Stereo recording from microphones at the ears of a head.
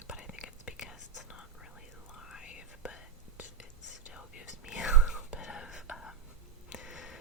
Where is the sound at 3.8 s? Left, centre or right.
Left.